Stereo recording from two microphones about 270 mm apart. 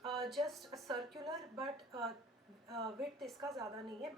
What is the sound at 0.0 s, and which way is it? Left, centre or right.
A woman's voice, centre.